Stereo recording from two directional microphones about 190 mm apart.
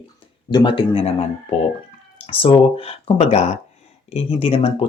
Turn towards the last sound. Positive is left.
turn(degrees=30)  # may be behind; listen again after turning